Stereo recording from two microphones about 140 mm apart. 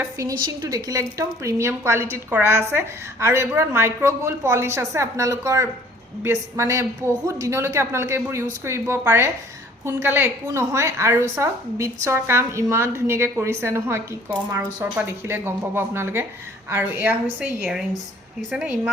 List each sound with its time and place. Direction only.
0.0 s a woman's voice: 25° right (ahead or behind); by 17.8 s 5° right (ahead or behind)